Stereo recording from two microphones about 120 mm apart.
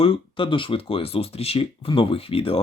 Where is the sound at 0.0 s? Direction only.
50° left (ahead or behind).